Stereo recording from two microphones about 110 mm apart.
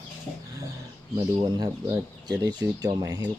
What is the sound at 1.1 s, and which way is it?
Speech, 35° right (ahead or behind).